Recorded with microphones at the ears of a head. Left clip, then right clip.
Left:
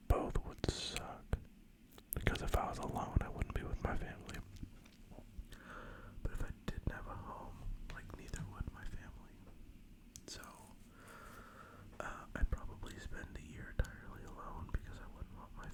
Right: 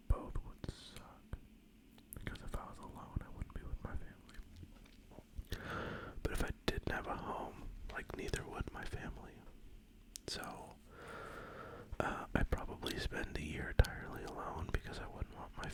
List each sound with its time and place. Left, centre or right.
0.1 s whispering: left
5.5 s whispering: right